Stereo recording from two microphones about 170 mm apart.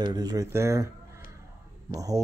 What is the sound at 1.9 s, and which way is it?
Speech, 20° right (ahead or behind).